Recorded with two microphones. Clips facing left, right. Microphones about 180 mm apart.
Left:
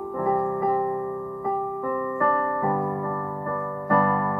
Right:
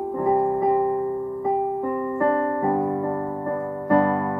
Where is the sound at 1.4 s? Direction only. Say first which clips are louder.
Right 4 dB; 25° right (ahead or behind).